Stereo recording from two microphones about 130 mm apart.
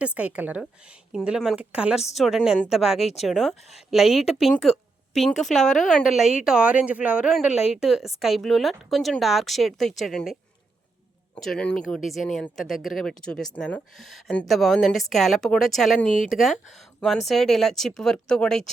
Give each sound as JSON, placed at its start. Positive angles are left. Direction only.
{"t": 0.0, "sound": "speech", "side_deg": -10}
{"t": 3.0, "sound": "speech", "side_deg": 55}
{"t": 3.2, "sound": "a woman's voice", "side_deg": 0}
{"t": 11.3, "sound": "speech", "side_deg": 5}
{"t": 16.0, "sound": "speech", "side_deg": 75}
{"t": 17.0, "sound": "speech", "side_deg": 0}